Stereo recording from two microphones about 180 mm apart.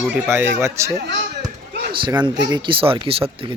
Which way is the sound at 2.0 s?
25° right (ahead or behind).